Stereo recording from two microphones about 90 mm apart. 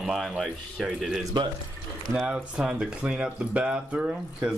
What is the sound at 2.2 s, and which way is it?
Speech, 10° right (ahead or behind).